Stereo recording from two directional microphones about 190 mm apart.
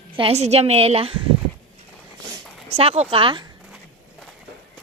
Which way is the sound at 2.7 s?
30° right (ahead or behind).